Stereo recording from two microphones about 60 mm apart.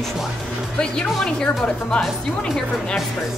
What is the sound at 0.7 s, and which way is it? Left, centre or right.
Speech, centre.